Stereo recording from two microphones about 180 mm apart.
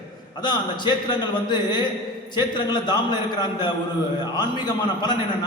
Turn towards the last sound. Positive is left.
turn(degrees=25)  # may be behind; listen again after turning